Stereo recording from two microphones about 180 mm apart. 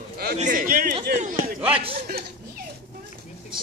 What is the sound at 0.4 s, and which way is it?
Speech, 50° right (ahead or behind).